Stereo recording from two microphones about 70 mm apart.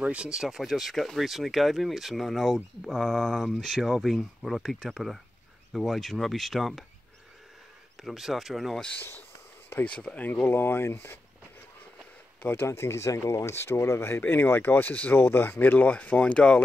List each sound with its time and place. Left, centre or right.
0.0 s speech: centre
0.3 s speech: centre
8.0 s speech: centre
9.8 s speech: centre; by 11.1 s left
12.4 s speech: left